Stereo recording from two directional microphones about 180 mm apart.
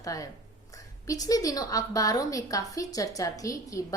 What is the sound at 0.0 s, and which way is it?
A woman's voice, 20° left (ahead or behind).